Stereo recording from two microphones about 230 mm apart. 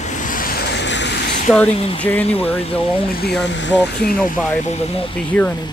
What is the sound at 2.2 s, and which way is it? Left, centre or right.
Speech, left.